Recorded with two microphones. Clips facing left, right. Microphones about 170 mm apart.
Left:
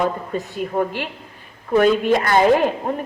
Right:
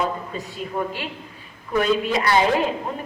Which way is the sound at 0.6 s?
50° left (ahead or behind).